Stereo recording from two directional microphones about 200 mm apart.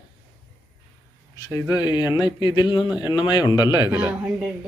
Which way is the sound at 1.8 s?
20° left (ahead or behind).